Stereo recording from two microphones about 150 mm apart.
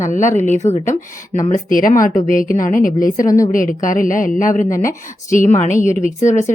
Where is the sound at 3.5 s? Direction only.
65° left (ahead or behind).